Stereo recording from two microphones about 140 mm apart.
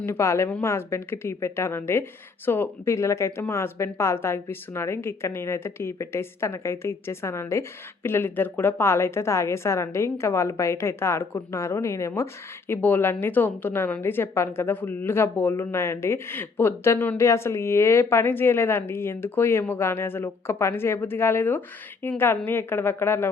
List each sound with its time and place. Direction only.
0.0 s a woman's voice: 20° left (ahead or behind)